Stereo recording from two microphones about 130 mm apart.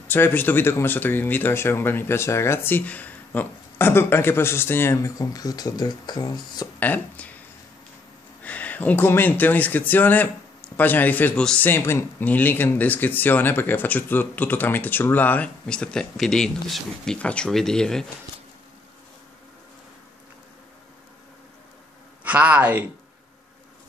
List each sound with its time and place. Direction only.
0.1 s a man's voice: 15° left (ahead or behind); by 6.7 s 30° left (ahead or behind)
6.8 s speech: 10° left (ahead or behind)
8.5 s a man's voice: 10° left (ahead or behind)
22.2 s a man's voice: 10° right (ahead or behind)